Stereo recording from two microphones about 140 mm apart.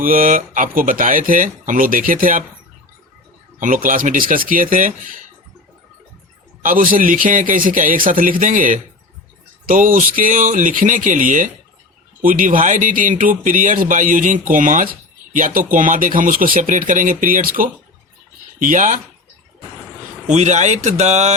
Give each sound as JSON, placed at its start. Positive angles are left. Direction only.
{"t": 0.0, "sound": "speech", "side_deg": -80}
{"t": 3.6, "sound": "speech", "side_deg": -70}
{"t": 6.6, "sound": "speech", "side_deg": -75}
{"t": 18.6, "sound": "speech", "side_deg": -65}
{"t": 20.2, "sound": "speech", "side_deg": -55}